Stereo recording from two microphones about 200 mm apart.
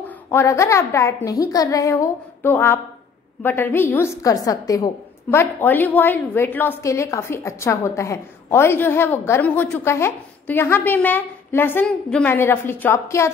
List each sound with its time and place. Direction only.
0.3 s a woman's voice: 15° left (ahead or behind)